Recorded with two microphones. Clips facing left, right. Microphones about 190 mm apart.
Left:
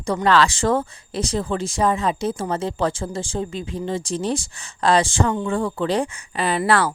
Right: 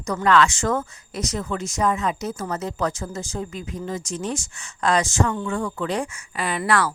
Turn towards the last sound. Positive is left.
turn(degrees=30)  # may be behind; listen again after turning